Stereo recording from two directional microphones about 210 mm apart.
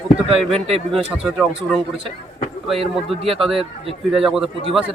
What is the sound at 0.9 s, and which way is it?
Speech, centre (ahead or behind).